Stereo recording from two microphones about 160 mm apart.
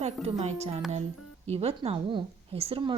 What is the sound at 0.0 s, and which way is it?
Speech, 40° right (ahead or behind).